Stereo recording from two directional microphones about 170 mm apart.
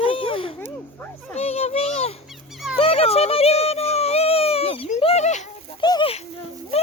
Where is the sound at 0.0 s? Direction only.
30° left (ahead or behind).